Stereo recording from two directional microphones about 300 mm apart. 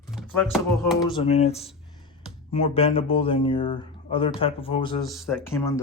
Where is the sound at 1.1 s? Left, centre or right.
Centre.